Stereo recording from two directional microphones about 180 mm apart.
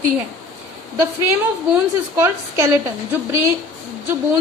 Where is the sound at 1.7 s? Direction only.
15° right (ahead or behind).